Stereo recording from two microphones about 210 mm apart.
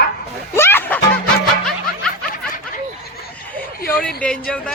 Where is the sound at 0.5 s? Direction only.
10° left (ahead or behind).